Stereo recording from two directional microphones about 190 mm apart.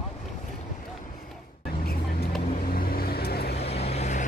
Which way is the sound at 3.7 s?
35° left (ahead or behind).